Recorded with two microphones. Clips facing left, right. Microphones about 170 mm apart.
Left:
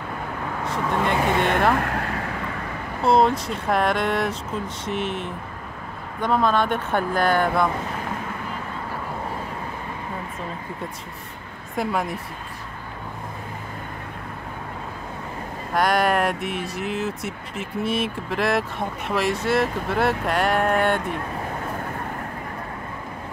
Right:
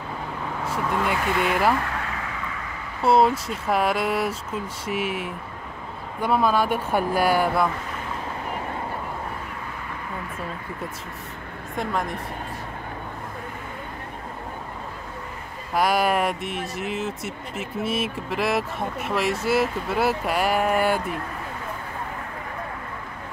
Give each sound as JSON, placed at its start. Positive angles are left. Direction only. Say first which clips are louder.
{"t": 0.7, "sound": "speech", "louder": "left 1 dB", "side_deg": -5}
{"t": 1.8, "sound": "vehicle", "louder": "left 4 dB", "side_deg": 55}
{"t": 3.0, "sound": "speech", "louder": "even", "side_deg": -5}
{"t": 11.7, "sound": "speech", "louder": "left 2 dB", "side_deg": 5}
{"t": 15.7, "sound": "speech", "louder": "left 1 dB", "side_deg": -5}